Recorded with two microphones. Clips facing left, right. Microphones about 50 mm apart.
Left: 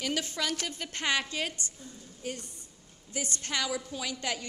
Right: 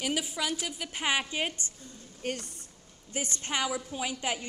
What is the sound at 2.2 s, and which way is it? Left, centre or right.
Speech, right.